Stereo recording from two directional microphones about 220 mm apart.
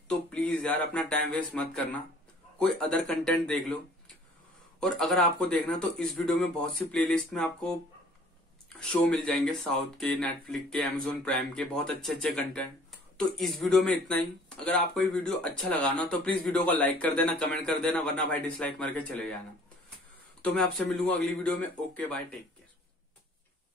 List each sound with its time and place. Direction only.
0.1 s speech: 5° left (ahead or behind)
20.5 s speech: 5° left (ahead or behind)